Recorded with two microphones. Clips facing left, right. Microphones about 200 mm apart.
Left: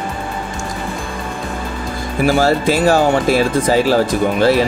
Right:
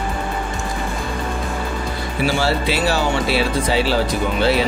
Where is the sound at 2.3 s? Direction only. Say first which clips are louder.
Left 7 dB; 45° left (ahead or behind).